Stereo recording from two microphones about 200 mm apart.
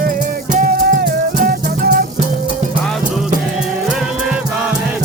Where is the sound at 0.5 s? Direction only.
45° right (ahead or behind).